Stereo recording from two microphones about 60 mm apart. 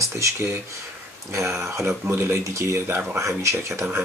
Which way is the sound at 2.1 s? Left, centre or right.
Right.